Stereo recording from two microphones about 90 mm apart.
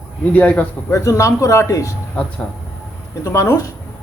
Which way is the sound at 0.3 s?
15° left (ahead or behind).